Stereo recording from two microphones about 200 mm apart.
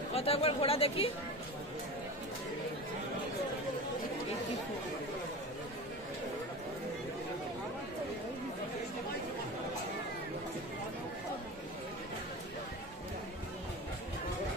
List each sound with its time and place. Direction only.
0.1 s chatter: 30° left (ahead or behind)